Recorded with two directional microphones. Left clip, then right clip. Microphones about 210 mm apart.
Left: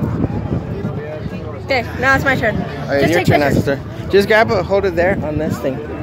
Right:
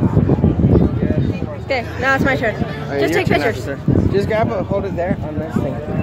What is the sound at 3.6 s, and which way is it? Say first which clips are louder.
Speech: even; 40° left (ahead or behind).